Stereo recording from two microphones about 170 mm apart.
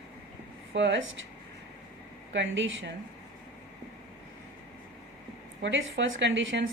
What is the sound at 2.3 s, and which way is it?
Speech, 90° right.